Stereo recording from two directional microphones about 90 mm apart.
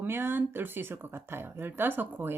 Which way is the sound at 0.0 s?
25° right (ahead or behind).